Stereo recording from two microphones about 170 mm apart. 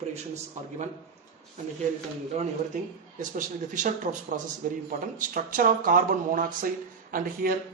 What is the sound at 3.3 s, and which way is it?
Speech, 50° right (ahead or behind).